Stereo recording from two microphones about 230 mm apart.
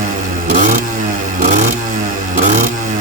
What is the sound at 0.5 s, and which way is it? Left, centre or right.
Vehicle, right.